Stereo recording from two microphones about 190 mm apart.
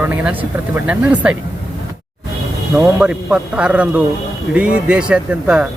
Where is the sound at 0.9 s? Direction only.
5° right (ahead or behind).